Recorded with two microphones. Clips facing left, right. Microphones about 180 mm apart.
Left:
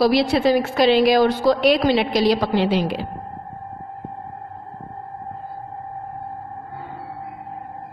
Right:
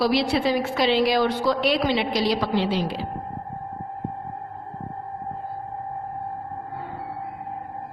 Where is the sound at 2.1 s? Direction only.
55° left (ahead or behind).